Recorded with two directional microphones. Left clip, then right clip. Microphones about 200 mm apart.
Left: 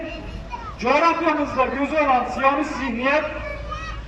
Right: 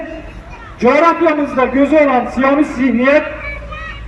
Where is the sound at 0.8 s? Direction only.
30° right (ahead or behind).